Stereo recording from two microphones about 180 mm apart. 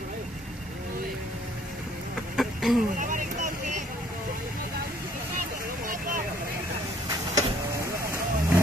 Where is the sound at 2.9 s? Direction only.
45° right (ahead or behind).